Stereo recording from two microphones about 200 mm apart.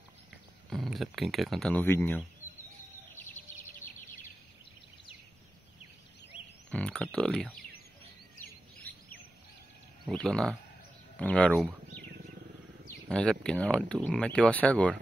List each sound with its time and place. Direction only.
0.7 s speech: centre (ahead or behind)
6.7 s a sound: 5° left (ahead or behind)
8.9 s bird: 50° right (ahead or behind)
10.0 s speech: 5° left (ahead or behind)
13.1 s speech: 5° left (ahead or behind)